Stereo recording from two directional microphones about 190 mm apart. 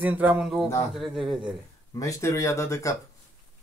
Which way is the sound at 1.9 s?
15° left (ahead or behind).